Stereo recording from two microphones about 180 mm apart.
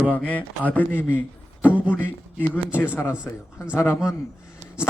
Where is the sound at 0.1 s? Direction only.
10° left (ahead or behind).